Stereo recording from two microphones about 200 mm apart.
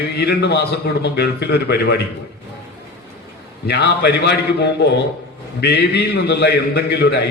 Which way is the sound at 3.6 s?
55° left (ahead or behind).